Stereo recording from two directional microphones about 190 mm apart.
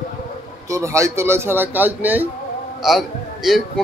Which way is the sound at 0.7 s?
15° right (ahead or behind).